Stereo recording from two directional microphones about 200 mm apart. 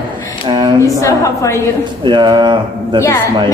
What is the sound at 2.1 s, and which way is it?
Speech, 20° right (ahead or behind).